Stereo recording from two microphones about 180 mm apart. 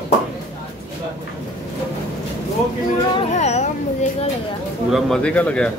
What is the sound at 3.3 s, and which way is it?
Speech, 40° left (ahead or behind).